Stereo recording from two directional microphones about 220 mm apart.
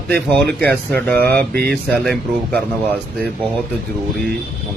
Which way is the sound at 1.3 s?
45° right (ahead or behind).